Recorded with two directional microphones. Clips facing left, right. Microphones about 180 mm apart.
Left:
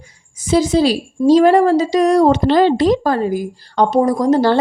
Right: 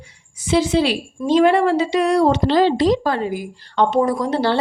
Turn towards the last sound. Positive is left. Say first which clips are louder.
# left 6 dB
turn(degrees=45)  # may be behind; listen again after turning